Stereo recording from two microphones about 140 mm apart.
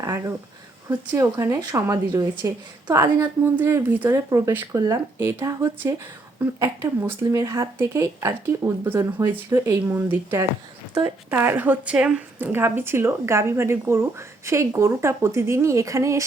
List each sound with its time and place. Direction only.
0.0 s a woman's voice: 20° right (ahead or behind)